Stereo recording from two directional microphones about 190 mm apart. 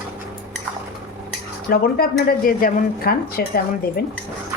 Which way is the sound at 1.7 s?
55° left (ahead or behind).